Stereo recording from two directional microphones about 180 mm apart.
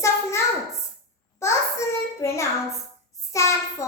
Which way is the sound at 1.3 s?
15° left (ahead or behind).